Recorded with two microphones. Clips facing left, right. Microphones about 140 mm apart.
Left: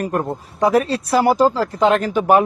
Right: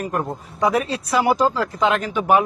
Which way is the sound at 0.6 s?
35° left (ahead or behind).